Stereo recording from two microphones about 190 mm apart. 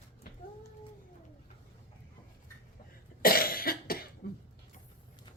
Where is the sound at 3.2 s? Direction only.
50° left (ahead or behind).